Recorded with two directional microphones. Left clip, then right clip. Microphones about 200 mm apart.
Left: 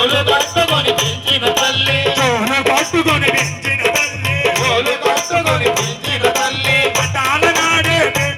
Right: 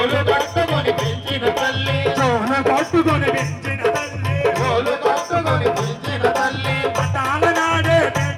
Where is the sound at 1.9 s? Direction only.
25° right (ahead or behind).